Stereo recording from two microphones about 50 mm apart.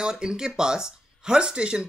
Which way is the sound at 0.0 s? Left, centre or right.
Centre.